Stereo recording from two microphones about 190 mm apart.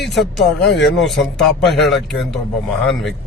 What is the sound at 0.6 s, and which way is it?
Speech, 70° left (ahead or behind).